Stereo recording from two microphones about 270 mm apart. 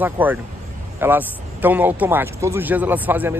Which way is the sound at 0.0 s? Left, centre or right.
Centre.